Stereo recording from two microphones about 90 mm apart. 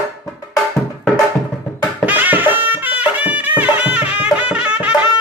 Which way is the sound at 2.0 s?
20° right (ahead or behind).